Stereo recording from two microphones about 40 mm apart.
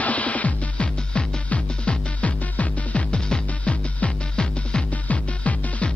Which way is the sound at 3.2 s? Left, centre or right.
Left.